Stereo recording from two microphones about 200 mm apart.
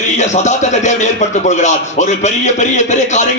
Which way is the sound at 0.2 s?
35° left (ahead or behind).